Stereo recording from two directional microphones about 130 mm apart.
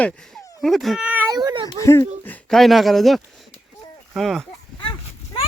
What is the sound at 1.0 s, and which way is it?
Baby cry, 15° right (ahead or behind).